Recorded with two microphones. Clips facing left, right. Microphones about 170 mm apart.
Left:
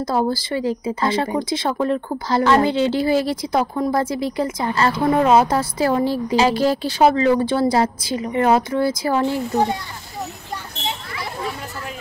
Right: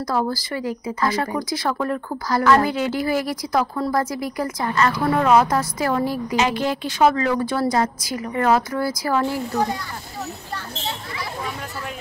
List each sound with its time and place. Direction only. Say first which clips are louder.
0.0 s speech: left 3 dB; 25° left (ahead or behind)